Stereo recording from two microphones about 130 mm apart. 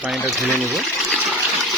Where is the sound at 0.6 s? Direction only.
Centre (ahead or behind).